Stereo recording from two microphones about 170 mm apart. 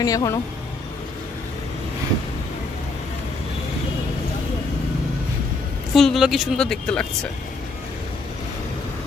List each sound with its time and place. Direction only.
0.0 s speech: 20° left (ahead or behind)
5.9 s speech: centre (ahead or behind)